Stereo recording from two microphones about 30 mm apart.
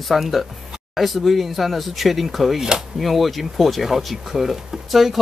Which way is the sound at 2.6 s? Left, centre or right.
Right.